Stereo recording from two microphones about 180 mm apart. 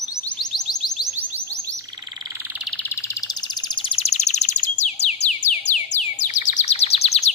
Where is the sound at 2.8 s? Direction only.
15° left (ahead or behind); by 4.6 s 40° left (ahead or behind).